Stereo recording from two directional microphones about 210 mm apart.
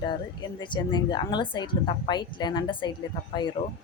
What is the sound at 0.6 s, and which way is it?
A woman's voice, 20° left (ahead or behind).